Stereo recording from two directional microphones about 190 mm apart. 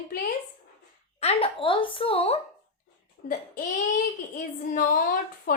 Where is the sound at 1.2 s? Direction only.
30° left (ahead or behind).